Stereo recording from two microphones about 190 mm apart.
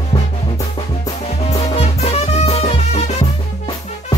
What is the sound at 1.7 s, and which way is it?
Music, 35° left (ahead or behind).